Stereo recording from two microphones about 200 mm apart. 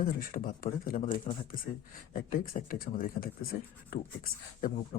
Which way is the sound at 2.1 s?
45° left (ahead or behind).